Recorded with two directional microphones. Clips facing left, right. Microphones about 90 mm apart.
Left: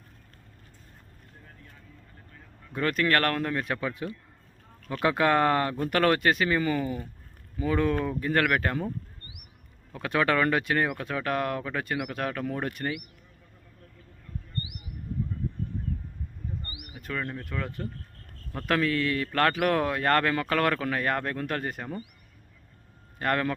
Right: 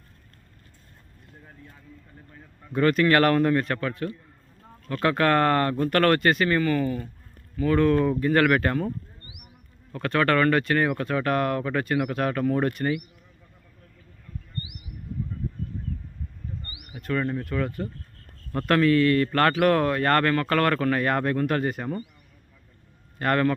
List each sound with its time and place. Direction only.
2.7 s speech: centre (ahead or behind)
6.6 s speech: 10° left (ahead or behind)
9.9 s speech: 5° left (ahead or behind)
16.9 s speech: centre (ahead or behind)
23.1 s a man's voice: centre (ahead or behind)